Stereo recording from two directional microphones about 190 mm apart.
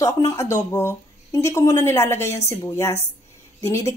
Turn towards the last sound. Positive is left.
turn(degrees=15)  # may be behind; listen again after turning